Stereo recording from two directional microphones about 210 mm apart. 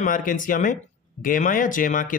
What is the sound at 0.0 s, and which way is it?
Speech, 40° left (ahead or behind).